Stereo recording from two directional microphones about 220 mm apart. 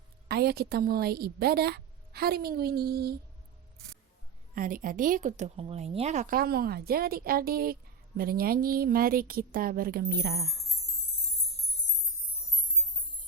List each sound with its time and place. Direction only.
0.3 s a woman's voice: 45° right (ahead or behind)
4.5 s a woman's voice: 40° right (ahead or behind)